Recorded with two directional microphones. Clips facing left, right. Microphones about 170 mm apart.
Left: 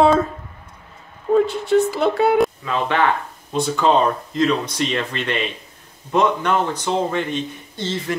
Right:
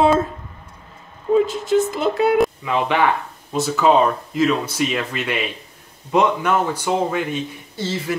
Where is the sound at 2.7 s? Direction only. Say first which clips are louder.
Right 1 dB; 15° right (ahead or behind).